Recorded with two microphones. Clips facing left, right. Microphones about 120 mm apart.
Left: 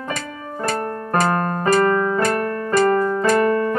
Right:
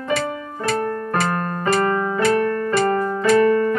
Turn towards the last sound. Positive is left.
turn(degrees=40)  # may be behind; listen again after turning